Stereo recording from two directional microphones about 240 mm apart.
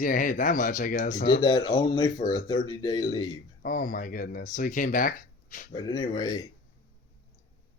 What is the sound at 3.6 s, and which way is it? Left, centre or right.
Speech, left.